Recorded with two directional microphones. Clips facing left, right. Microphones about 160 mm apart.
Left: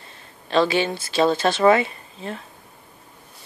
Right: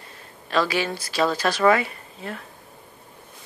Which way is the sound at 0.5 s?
25° left (ahead or behind).